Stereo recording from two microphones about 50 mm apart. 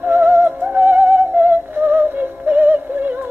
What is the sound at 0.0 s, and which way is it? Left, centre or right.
Music, right.